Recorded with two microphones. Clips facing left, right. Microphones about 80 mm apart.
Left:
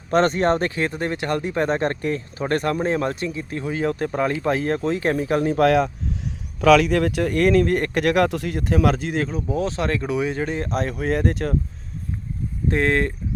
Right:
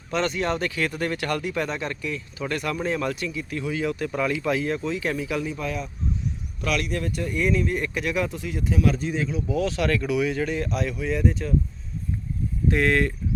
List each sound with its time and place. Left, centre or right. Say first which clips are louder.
0.1 s speech: left 7 dB; left
5.5 s speech: left 13 dB; left
9.5 s speech: right 2 dB; left
12.7 s speech: left 2 dB; left